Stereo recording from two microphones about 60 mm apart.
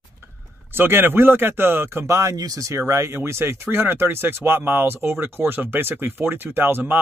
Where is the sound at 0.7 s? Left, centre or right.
Right.